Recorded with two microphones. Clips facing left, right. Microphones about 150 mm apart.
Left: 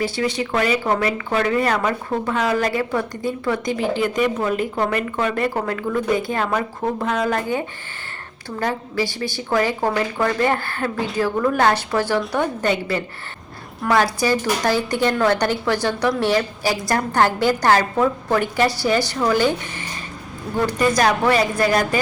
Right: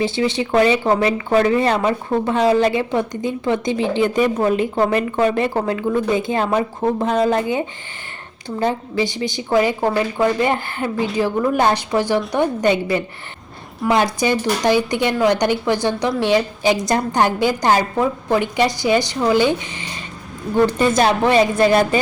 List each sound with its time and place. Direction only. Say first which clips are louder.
0.0 s a woman's voice: right 3 dB; 25° right (ahead or behind)